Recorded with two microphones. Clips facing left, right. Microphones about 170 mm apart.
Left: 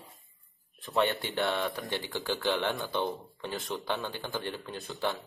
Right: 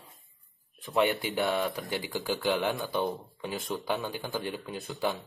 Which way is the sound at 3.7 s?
15° right (ahead or behind).